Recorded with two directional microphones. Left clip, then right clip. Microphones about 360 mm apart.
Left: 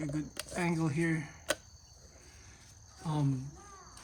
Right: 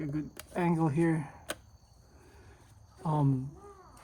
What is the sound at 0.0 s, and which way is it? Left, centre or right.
Speech, centre.